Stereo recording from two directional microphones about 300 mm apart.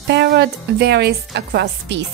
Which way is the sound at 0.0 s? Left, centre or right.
Right.